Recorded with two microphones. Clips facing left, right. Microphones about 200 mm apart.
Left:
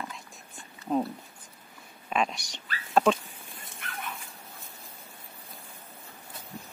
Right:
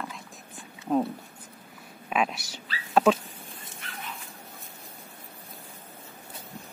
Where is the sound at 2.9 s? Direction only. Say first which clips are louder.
Right 2 dB; 5° right (ahead or behind).